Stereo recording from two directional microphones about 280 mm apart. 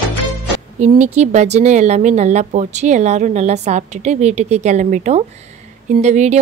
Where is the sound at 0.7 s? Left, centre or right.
Right.